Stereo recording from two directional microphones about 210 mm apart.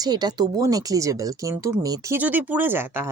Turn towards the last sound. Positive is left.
turn(degrees=-10)  # may be behind; listen again after turning